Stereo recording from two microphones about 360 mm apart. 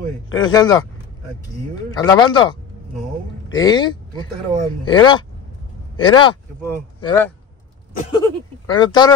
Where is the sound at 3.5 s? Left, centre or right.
Centre.